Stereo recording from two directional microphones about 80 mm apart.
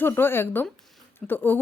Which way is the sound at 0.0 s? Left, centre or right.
Left.